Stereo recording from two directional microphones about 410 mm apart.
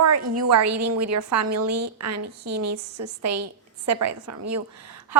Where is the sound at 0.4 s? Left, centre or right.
Right.